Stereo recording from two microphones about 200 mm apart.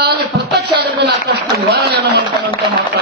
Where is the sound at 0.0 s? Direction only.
55° right (ahead or behind).